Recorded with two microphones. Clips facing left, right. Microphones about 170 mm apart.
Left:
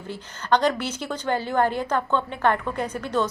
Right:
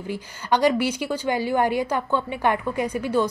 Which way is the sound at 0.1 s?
10° right (ahead or behind).